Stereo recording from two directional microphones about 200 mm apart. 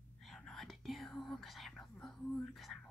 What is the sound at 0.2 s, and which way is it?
Whispering, centre (ahead or behind).